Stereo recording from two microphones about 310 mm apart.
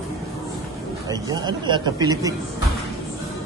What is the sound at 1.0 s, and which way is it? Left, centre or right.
A man's voice, centre.